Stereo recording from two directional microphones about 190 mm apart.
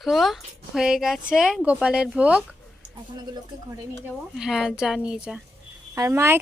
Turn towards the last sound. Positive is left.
turn(degrees=-15)  # may be behind; listen again after turning